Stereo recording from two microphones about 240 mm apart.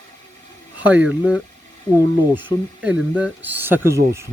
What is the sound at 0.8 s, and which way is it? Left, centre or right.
Speech, centre.